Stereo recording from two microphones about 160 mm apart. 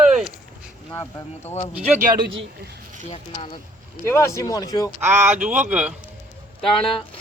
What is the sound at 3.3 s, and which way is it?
Speech, 30° left (ahead or behind).